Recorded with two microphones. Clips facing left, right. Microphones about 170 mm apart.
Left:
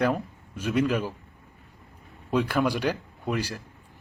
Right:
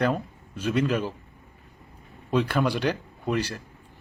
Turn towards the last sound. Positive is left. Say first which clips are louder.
# right 2 dB
turn(degrees=5)  # may be behind; listen again after turning